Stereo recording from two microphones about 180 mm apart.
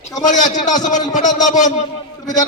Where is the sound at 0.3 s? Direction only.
40° left (ahead or behind).